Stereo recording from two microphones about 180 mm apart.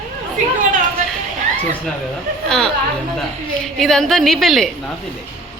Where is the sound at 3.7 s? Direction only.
Centre (ahead or behind).